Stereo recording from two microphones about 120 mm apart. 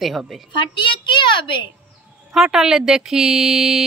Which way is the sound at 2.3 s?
5° right (ahead or behind).